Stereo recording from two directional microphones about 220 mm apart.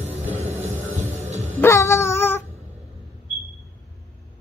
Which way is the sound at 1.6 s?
10° left (ahead or behind).